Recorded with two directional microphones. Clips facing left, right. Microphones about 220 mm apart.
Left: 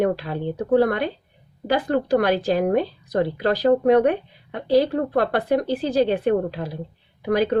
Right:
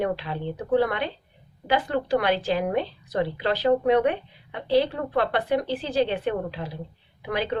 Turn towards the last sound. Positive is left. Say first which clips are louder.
# left 7 dB
turn(degrees=40)  # may be behind; listen again after turning